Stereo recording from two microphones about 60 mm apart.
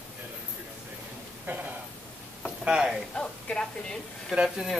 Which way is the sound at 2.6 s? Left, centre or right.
Centre.